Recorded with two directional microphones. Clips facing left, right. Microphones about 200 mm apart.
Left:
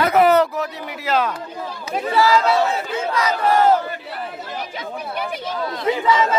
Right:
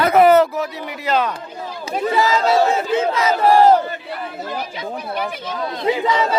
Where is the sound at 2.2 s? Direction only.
20° right (ahead or behind).